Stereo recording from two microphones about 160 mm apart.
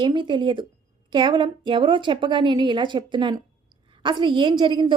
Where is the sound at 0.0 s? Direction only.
30° right (ahead or behind).